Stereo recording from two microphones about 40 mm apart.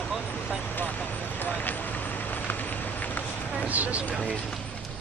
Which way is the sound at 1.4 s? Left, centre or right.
Left.